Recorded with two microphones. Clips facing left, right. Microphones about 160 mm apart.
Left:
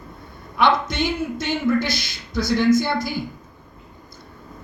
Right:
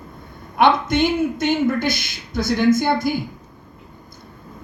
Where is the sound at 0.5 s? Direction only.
50° right (ahead or behind).